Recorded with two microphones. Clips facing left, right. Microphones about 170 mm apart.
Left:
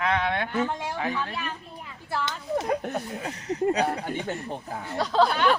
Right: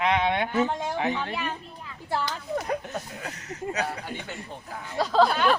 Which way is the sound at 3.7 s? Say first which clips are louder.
Left 5 dB; 30° left (ahead or behind).